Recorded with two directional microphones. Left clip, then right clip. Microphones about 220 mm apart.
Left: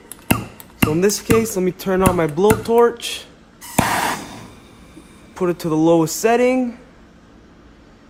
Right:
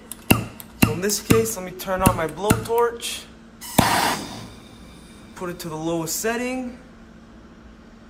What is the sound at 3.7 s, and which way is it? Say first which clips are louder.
Music: left 1 dB; 5° left (ahead or behind).